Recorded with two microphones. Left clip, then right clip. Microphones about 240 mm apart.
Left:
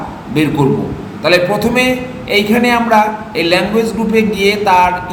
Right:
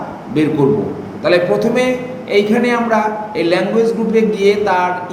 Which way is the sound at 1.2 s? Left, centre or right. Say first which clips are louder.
Left 1 dB; centre.